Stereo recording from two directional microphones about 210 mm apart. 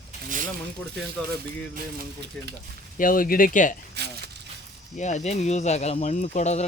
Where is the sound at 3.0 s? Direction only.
40° left (ahead or behind).